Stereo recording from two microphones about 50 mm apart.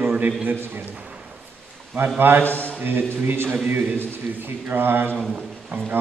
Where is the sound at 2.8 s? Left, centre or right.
Right.